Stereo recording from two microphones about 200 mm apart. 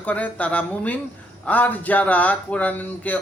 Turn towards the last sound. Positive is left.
turn(degrees=10)  # may be behind; listen again after turning